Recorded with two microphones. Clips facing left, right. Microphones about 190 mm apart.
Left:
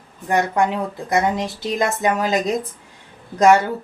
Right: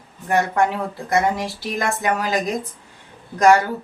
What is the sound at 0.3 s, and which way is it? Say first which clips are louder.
Speech: even; 15° left (ahead or behind).